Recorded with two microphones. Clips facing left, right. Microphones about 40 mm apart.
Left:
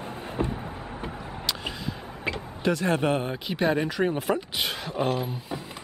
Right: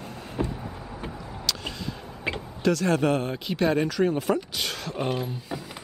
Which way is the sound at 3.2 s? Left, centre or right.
Centre.